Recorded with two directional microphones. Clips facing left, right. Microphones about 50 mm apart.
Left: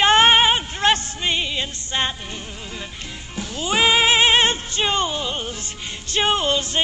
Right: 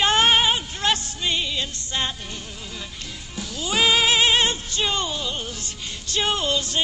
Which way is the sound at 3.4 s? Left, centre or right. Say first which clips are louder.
Left 3 dB; left.